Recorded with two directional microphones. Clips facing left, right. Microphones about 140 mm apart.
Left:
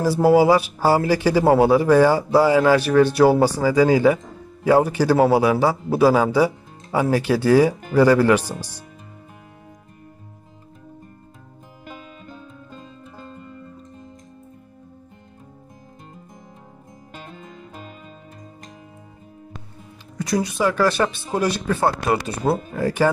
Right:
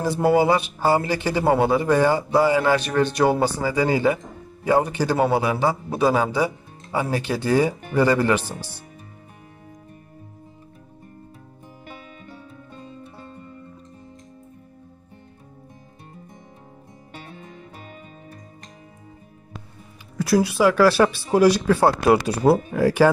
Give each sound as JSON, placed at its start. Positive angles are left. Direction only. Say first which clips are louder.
{"t": 0.0, "sound": "speech", "louder": "left 3 dB", "side_deg": 5}
{"t": 20.2, "sound": "speech", "louder": "right 3 dB", "side_deg": -5}